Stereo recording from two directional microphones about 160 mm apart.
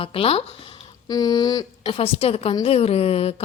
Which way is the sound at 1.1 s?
25° left (ahead or behind).